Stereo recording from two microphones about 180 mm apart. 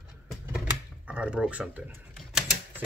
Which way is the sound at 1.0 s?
5° right (ahead or behind).